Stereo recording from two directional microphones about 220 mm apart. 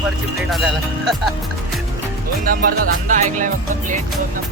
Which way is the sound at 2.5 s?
40° right (ahead or behind).